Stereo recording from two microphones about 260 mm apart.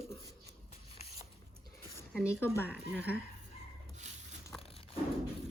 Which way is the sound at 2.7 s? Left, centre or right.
Centre.